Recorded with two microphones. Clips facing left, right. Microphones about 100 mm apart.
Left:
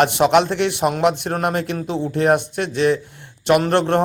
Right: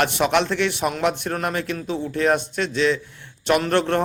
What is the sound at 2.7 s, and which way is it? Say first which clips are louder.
Speech: left 3 dB; 50° left (ahead or behind).